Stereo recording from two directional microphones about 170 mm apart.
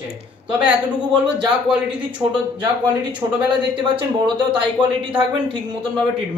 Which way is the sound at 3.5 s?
30° right (ahead or behind).